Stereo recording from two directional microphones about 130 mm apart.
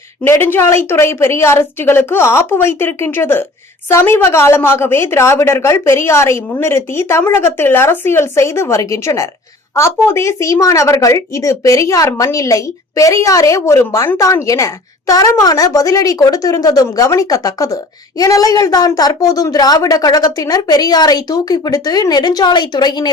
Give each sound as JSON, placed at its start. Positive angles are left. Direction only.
{"t": 0.3, "sound": "a woman's voice", "side_deg": 15}